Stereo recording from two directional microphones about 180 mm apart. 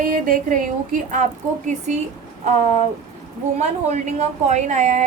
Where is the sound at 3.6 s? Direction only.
40° right (ahead or behind).